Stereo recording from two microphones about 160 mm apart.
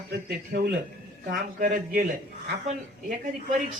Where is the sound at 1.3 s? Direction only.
60° right (ahead or behind).